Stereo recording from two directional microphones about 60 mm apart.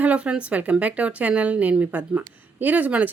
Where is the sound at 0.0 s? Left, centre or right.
Right.